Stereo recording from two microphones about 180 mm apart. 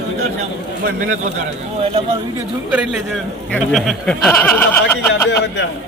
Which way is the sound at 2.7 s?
Centre (ahead or behind).